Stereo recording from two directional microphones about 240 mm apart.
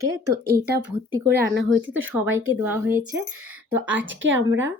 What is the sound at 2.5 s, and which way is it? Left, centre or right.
A woman's voice, centre.